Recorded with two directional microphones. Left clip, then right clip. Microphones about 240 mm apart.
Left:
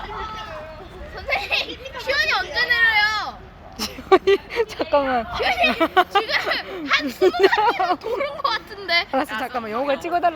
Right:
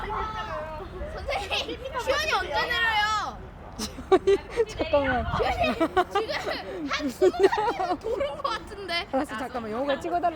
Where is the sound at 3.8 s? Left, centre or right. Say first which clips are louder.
Left 6 dB; centre.